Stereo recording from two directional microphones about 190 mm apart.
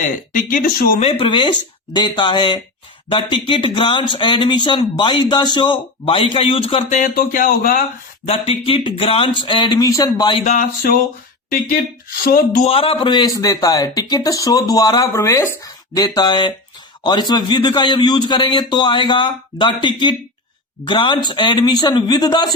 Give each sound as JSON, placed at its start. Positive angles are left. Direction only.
{"t": 0.5, "sound": "speech", "side_deg": 50}
{"t": 1.2, "sound": "speech", "side_deg": 25}
{"t": 7.0, "sound": "speech", "side_deg": 50}
{"t": 8.3, "sound": "speech", "side_deg": 30}
{"t": 10.4, "sound": "a sound", "side_deg": 40}
{"t": 11.4, "sound": "speech", "side_deg": 50}
{"t": 12.6, "sound": "speech", "side_deg": 30}